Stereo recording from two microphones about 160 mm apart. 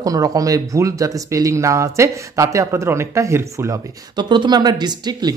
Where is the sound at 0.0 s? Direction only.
20° right (ahead or behind).